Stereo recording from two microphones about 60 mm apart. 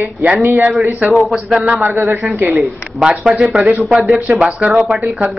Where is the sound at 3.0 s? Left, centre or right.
Centre.